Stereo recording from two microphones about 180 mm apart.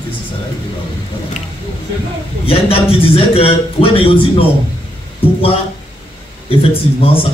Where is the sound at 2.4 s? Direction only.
30° left (ahead or behind).